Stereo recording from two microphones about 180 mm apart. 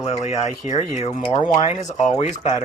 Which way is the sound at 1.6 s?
40° left (ahead or behind).